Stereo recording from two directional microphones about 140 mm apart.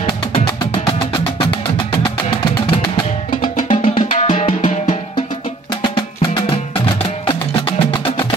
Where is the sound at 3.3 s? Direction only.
70° left (ahead or behind).